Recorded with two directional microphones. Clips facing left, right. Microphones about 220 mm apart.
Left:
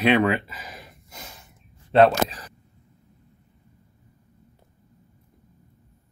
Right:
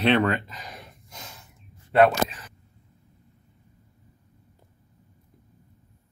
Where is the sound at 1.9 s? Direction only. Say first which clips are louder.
Left 2 dB; 30° left (ahead or behind).